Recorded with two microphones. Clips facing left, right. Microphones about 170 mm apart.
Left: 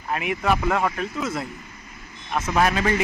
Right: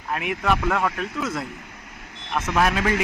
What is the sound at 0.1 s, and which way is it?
Speech, centre (ahead or behind).